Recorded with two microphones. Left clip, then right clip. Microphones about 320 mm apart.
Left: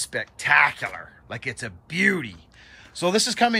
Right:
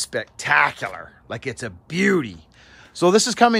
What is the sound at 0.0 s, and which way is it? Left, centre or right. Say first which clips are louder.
Speech: right 1 dB; centre.